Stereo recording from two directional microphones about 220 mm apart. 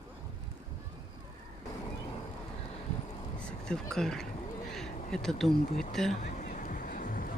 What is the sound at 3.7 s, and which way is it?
Speech, centre (ahead or behind).